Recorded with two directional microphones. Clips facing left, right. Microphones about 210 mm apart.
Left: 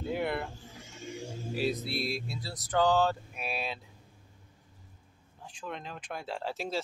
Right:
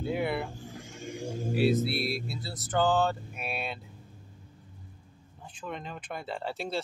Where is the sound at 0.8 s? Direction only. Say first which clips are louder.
Right 3 dB; 55° right (ahead or behind).